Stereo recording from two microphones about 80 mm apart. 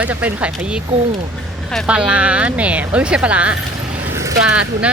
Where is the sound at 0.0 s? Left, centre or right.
Centre.